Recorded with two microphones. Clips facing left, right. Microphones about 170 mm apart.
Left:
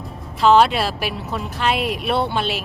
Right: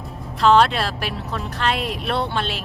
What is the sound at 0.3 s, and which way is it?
A woman's voice, 5° left (ahead or behind).